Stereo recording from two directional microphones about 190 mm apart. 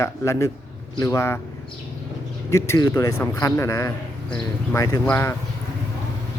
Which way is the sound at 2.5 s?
15° left (ahead or behind).